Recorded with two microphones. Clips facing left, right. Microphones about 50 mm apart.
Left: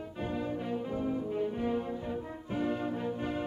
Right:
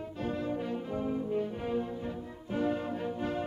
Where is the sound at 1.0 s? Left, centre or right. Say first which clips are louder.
Right 1 dB; centre.